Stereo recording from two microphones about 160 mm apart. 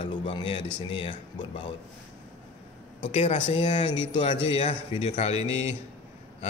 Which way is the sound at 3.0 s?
40° left (ahead or behind).